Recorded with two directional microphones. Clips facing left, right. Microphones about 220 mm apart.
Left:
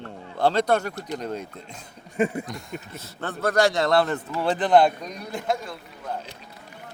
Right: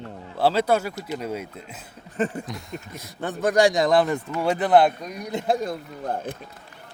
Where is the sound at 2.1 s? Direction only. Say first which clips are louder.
Left 2 dB; 10° left (ahead or behind).